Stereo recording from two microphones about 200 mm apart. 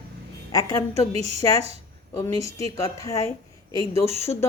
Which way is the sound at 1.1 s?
30° right (ahead or behind).